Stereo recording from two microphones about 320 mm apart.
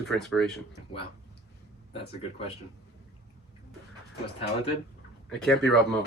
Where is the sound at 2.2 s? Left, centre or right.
Centre.